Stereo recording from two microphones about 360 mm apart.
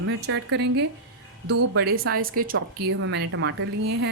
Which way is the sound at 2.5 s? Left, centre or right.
Right.